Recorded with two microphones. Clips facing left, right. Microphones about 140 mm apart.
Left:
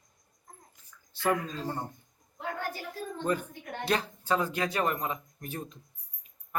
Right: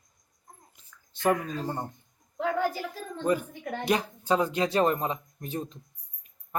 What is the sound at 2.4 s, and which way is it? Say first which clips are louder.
Speech: right 9 dB; 90° right.